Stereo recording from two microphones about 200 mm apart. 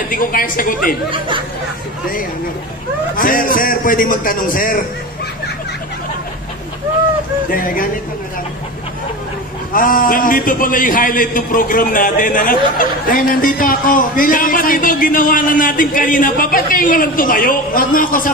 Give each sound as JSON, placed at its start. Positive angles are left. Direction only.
{"t": 0.1, "sound": "a man's voice", "side_deg": 45}
{"t": 1.1, "sound": "speech", "side_deg": -25}
{"t": 3.2, "sound": "a man's voice", "side_deg": 45}
{"t": 7.5, "sound": "a man's voice", "side_deg": 45}
{"t": 9.7, "sound": "a man's voice", "side_deg": 45}